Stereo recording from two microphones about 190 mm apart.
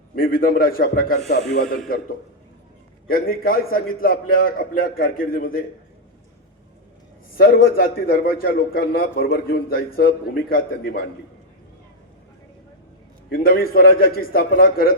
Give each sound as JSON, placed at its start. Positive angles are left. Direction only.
{"t": 0.2, "sound": "a man's voice", "side_deg": 50}
{"t": 3.1, "sound": "a man's voice", "side_deg": 50}
{"t": 7.3, "sound": "a man's voice", "side_deg": 50}
{"t": 13.3, "sound": "a man's voice", "side_deg": 50}